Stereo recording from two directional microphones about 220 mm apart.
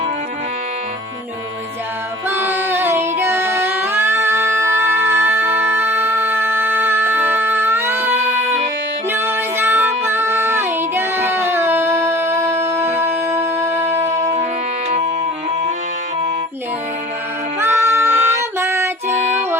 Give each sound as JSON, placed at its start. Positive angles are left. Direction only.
{"t": 2.3, "sound": "music", "side_deg": -10}
{"t": 9.0, "sound": "child singing", "side_deg": -10}
{"t": 14.8, "sound": "music", "side_deg": -30}
{"t": 17.6, "sound": "music", "side_deg": -10}